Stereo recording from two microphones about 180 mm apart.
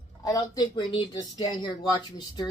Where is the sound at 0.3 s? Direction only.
25° left (ahead or behind).